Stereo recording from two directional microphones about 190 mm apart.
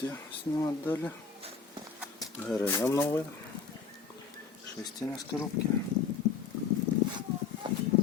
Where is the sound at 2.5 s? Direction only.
5° left (ahead or behind).